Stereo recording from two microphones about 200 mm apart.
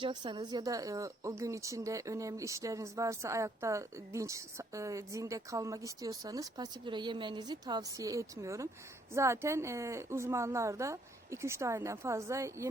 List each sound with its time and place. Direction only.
0.0 s speech: 25° right (ahead or behind)